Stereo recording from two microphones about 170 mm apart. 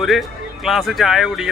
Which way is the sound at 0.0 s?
Centre (ahead or behind).